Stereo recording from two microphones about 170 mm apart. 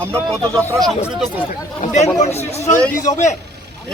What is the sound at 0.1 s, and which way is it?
Speech, 5° left (ahead or behind).